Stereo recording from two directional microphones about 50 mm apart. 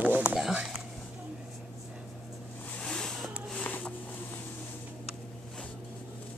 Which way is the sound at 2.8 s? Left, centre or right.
Centre.